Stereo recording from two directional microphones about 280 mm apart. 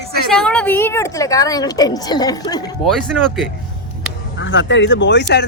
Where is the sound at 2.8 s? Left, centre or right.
Centre.